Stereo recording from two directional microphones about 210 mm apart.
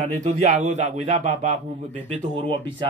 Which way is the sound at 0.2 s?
30° right (ahead or behind).